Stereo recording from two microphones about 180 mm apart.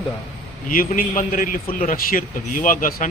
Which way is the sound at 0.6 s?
50° left (ahead or behind).